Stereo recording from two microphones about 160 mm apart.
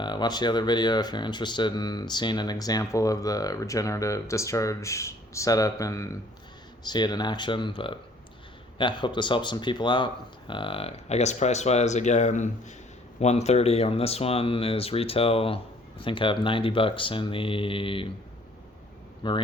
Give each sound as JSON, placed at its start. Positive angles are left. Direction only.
{"t": 0.0, "sound": "speech", "side_deg": 25}
{"t": 19.2, "sound": "speech", "side_deg": 30}